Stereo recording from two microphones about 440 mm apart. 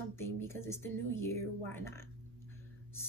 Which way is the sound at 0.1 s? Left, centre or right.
Centre.